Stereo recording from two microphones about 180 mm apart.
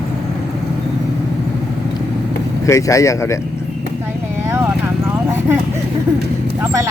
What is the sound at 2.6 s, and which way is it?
Speech, 20° left (ahead or behind).